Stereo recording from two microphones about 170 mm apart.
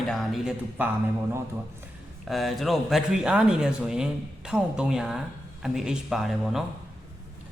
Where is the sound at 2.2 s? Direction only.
Centre (ahead or behind).